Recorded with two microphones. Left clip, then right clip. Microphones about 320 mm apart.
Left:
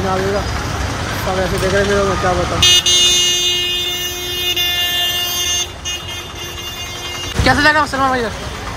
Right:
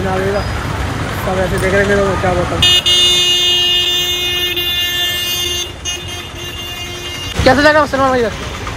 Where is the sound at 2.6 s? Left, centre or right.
Right.